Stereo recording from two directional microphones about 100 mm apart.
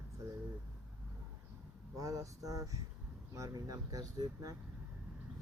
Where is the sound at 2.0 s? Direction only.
35° right (ahead or behind).